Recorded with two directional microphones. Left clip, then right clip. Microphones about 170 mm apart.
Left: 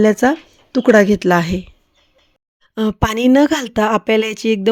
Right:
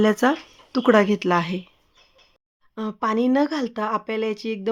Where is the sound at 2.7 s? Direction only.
55° left (ahead or behind).